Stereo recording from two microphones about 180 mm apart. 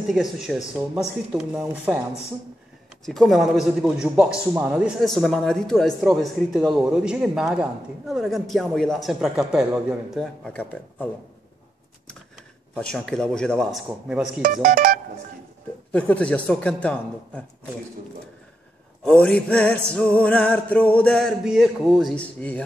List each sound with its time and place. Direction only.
0.1 s a man's voice: centre (ahead or behind)
3.1 s a man's voice: centre (ahead or behind)
12.7 s a man's voice: 5° left (ahead or behind)
14.4 s speech: 50° right (ahead or behind)
15.9 s music: 5° left (ahead or behind)
19.0 s a man's voice: 5° left (ahead or behind)
19.9 s music: 5° left (ahead or behind)